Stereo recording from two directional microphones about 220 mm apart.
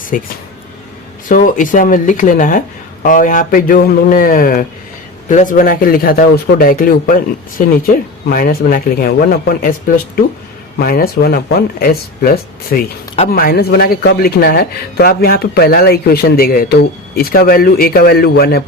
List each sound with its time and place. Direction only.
0.1 s speech: 35° left (ahead or behind)
1.3 s speech: 40° left (ahead or behind)
8.3 s speech: 40° left (ahead or behind)